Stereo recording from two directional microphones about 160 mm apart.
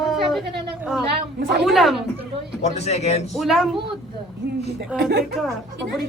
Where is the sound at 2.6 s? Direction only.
40° left (ahead or behind).